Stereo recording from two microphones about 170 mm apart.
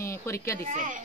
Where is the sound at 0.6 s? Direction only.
45° right (ahead or behind).